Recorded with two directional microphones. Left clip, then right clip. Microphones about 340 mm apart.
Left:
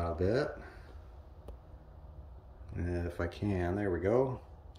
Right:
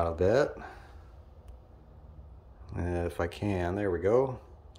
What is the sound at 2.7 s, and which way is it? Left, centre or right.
Speech, centre.